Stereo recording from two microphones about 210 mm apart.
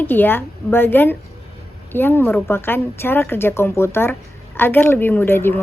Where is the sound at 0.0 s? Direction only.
10° left (ahead or behind).